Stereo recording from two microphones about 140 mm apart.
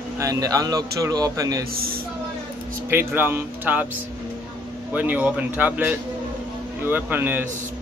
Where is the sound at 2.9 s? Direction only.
15° right (ahead or behind).